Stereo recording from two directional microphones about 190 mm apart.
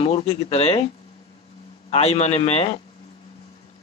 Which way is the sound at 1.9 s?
35° left (ahead or behind).